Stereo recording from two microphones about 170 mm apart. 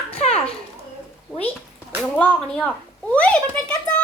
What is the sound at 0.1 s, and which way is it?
Children playing, 40° left (ahead or behind).